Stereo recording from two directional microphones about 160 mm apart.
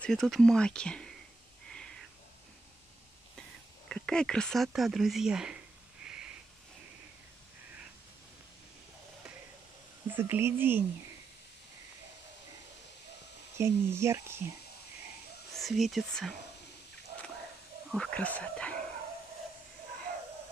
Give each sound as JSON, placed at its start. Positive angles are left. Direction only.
{"t": 0.0, "sound": "speech", "side_deg": 0}
{"t": 3.9, "sound": "speech", "side_deg": 5}
{"t": 6.0, "sound": "a sound", "side_deg": -5}
{"t": 10.0, "sound": "speech", "side_deg": -15}
{"t": 13.6, "sound": "speech", "side_deg": -15}
{"t": 15.5, "sound": "speech", "side_deg": 0}
{"t": 17.9, "sound": "speech", "side_deg": 5}